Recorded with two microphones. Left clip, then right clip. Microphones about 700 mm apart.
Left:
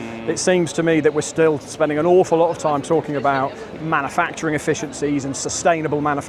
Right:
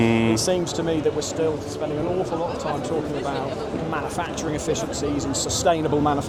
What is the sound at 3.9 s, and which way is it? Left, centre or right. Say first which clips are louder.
Speech: left 12 dB; left.